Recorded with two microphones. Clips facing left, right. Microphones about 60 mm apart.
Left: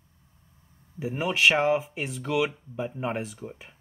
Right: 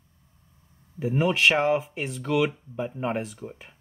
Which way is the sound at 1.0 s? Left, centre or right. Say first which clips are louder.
Right 3 dB; centre.